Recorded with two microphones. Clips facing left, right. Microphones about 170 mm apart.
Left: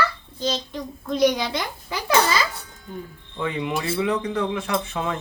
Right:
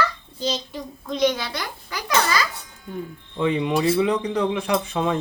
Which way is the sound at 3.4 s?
20° right (ahead or behind).